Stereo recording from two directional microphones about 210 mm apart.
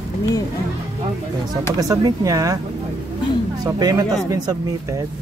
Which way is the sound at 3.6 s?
15° right (ahead or behind).